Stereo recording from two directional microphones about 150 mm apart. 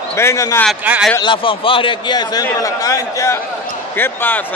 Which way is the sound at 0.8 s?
10° right (ahead or behind).